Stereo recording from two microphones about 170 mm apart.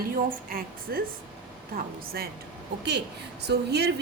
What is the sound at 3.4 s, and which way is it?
Speech, 75° right (ahead or behind).